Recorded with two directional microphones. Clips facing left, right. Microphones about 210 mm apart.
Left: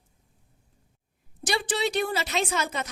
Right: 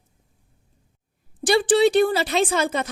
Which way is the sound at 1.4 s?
30° right (ahead or behind).